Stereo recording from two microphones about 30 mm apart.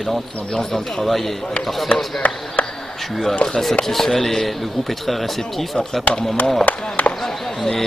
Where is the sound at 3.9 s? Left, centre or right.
Centre.